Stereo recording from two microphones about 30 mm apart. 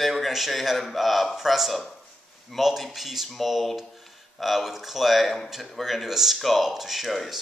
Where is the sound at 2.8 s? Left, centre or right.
Centre.